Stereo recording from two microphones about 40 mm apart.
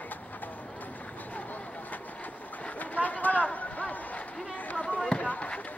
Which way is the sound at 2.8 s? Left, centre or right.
Left.